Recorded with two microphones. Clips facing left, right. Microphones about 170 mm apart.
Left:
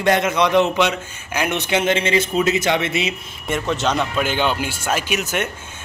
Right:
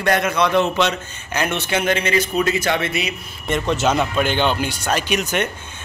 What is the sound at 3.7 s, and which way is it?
A man's voice, 5° right (ahead or behind).